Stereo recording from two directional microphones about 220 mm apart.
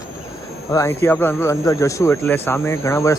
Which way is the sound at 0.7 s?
15° left (ahead or behind).